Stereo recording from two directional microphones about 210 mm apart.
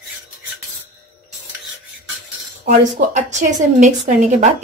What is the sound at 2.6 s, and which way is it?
A woman's voice, 35° right (ahead or behind).